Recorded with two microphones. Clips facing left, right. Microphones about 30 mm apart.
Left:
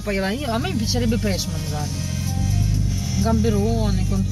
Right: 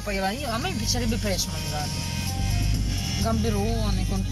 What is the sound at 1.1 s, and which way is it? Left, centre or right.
Speech, left.